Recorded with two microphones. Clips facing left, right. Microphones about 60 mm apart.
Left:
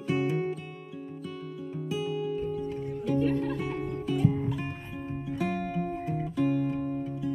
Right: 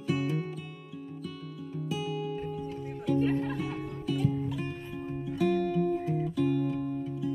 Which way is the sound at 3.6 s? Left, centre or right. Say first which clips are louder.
Left 3 dB; centre.